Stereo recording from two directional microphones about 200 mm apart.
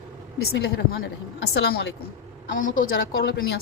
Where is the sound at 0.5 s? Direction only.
55° left (ahead or behind).